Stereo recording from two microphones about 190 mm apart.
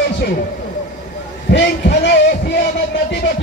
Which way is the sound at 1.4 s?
60° left (ahead or behind).